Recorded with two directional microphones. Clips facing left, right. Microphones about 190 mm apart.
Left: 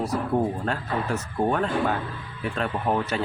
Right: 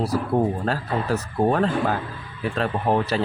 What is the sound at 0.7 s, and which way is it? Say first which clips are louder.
Speech: right 3 dB; 35° right (ahead or behind).